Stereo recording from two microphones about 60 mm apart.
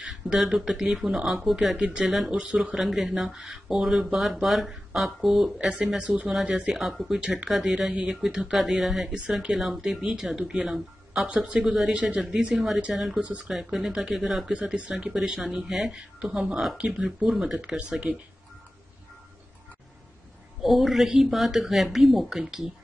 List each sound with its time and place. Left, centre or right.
0.4 s speech: centre
2.4 s speech: centre
2.7 s speech: centre
6.7 s speech: centre
7.2 s speech: centre
7.4 s speech: centre
12.5 s speech: centre
13.2 s speech: right
13.5 s speech: centre
14.5 s speech: centre
16.7 s speech: centre
20.6 s speech: centre